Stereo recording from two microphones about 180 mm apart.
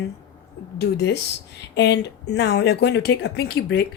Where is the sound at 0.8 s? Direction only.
70° left (ahead or behind).